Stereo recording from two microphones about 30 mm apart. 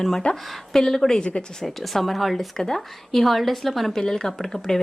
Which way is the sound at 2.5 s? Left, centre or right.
Centre.